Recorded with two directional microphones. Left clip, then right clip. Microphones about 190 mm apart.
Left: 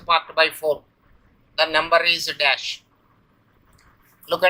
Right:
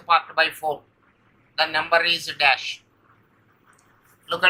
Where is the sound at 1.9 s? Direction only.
40° left (ahead or behind).